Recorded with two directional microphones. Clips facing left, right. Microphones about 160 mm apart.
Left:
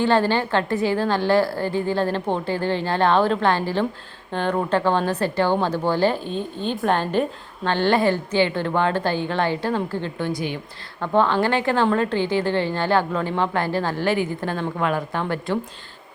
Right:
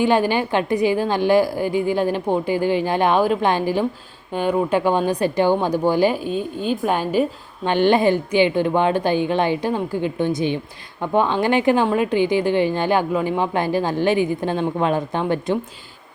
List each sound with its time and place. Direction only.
0.0 s speech: 15° right (ahead or behind)